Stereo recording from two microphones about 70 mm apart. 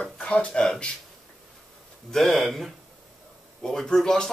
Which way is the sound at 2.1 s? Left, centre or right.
Centre.